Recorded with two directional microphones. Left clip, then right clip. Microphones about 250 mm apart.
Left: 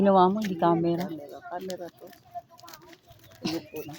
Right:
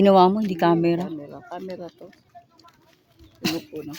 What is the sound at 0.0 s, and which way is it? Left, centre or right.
Speech, right.